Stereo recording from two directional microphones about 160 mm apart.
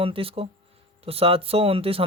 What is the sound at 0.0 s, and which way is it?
Speech, 35° right (ahead or behind).